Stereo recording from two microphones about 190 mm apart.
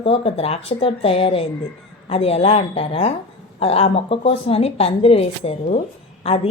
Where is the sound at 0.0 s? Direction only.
30° left (ahead or behind).